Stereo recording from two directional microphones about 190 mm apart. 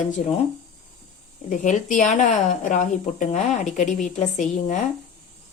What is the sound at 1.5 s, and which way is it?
Speech, 40° left (ahead or behind).